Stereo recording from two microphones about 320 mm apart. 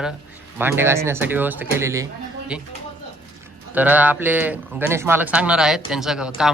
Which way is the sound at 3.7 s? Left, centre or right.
Centre.